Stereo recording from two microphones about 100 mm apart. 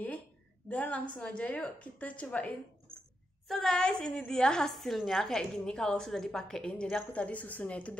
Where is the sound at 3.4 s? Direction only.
Centre (ahead or behind).